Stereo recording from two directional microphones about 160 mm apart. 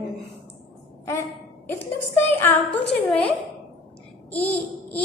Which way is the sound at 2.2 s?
15° left (ahead or behind).